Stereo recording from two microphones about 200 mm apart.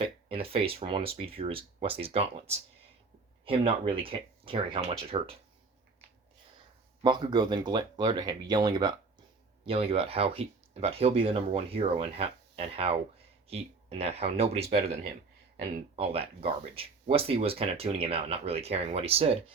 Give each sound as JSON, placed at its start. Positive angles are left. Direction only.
{"t": 0.0, "sound": "speech", "side_deg": -25}
{"t": 7.0, "sound": "speech", "side_deg": -20}